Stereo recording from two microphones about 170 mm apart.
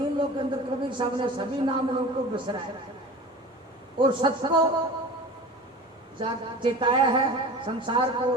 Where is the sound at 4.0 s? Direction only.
30° right (ahead or behind).